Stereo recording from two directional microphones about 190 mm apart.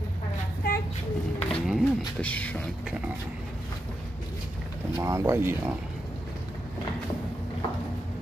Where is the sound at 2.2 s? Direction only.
5° left (ahead or behind).